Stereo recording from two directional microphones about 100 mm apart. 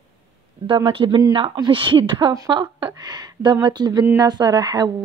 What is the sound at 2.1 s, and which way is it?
A woman's voice, 40° right (ahead or behind).